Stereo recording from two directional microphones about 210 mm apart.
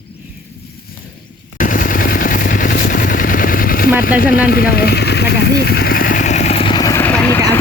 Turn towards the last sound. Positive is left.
turn(degrees=10)  # may be behind; listen again after turning